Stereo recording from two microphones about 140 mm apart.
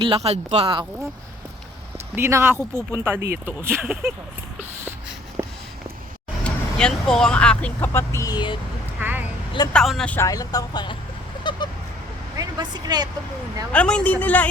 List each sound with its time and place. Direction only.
0.0 s speech: 45° right (ahead or behind)
2.1 s speech: 15° right (ahead or behind)
6.4 s speech: 5° left (ahead or behind); by 8.5 s 30° left (ahead or behind)
9.0 s vehicle: 15° right (ahead or behind)
9.7 s speech: centre (ahead or behind)
10.2 s speech: 25° left (ahead or behind)
11.6 s goose: 30° left (ahead or behind)
12.4 s speech: 30° right (ahead or behind)
13.7 s a woman's voice: 5° left (ahead or behind)